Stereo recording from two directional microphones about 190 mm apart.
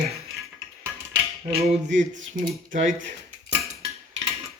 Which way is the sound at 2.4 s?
45° right (ahead or behind).